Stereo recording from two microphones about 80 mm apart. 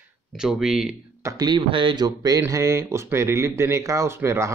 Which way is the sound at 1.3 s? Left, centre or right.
Right.